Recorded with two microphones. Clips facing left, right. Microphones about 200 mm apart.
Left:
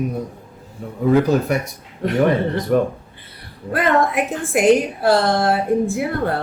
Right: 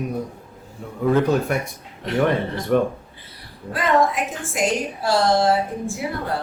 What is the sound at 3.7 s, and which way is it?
A woman's voice, 60° left (ahead or behind).